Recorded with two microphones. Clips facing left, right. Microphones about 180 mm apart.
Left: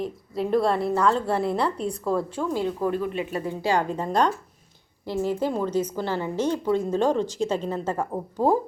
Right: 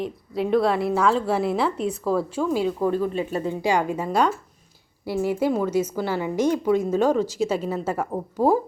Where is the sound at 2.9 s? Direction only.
35° right (ahead or behind).